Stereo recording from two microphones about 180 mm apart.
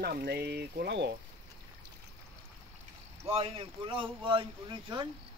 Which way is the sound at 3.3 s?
30° right (ahead or behind).